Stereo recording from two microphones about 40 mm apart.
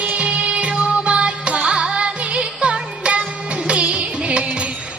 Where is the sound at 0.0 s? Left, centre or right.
Right.